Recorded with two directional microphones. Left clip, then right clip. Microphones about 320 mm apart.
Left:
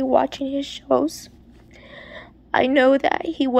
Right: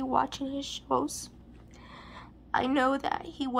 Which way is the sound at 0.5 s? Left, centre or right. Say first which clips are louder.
Left 10 dB; centre.